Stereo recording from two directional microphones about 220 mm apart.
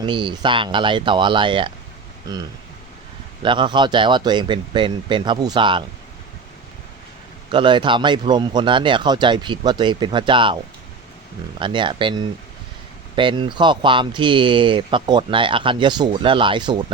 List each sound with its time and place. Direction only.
0.0 s speech: 20° right (ahead or behind)
7.5 s speech: 20° right (ahead or behind)
11.6 s speech: 20° right (ahead or behind)